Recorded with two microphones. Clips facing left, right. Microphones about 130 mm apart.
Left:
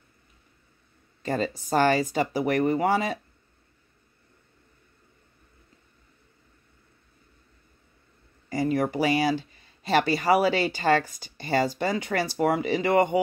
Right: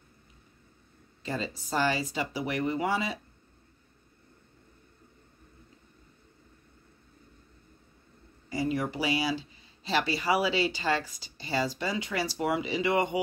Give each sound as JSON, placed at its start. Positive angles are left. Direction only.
{"t": 1.2, "sound": "speech", "side_deg": 50}
{"t": 8.5, "sound": "speech", "side_deg": 50}